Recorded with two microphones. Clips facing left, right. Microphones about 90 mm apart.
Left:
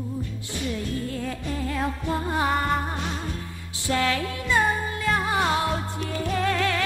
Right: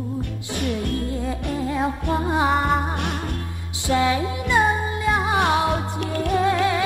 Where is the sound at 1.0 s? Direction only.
20° right (ahead or behind).